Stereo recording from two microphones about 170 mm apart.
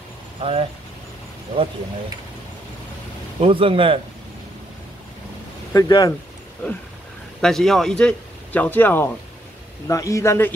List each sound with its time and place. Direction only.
0.4 s speech: 35° right (ahead or behind)
3.3 s speech: 35° right (ahead or behind)
5.7 s speech: 20° left (ahead or behind)
7.4 s a man's voice: centre (ahead or behind)